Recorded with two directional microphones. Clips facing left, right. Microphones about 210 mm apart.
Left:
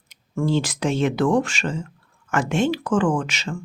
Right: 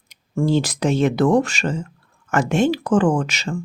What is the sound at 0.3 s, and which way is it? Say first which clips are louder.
Speech: right 3 dB; 40° right (ahead or behind).